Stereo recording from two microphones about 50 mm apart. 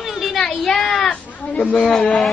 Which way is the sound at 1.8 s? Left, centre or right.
Centre.